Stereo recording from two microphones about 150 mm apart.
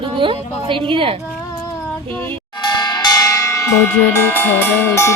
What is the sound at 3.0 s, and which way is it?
Bell, 25° left (ahead or behind).